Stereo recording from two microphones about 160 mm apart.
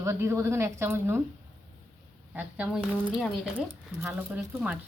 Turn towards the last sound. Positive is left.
turn(degrees=-5)  # may be behind; listen again after turning